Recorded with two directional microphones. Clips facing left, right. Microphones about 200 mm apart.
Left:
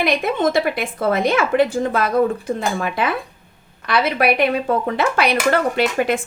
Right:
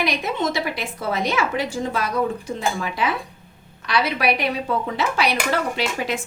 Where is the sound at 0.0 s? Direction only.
55° left (ahead or behind).